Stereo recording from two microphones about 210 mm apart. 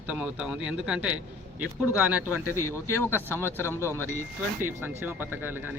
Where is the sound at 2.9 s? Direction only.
10° left (ahead or behind).